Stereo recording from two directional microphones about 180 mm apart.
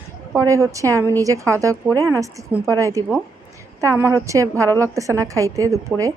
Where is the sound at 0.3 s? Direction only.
15° right (ahead or behind).